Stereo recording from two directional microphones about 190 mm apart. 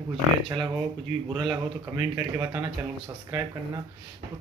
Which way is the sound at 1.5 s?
15° right (ahead or behind).